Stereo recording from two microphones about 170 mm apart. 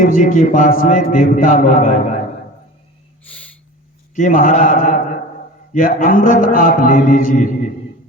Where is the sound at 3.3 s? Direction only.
10° left (ahead or behind).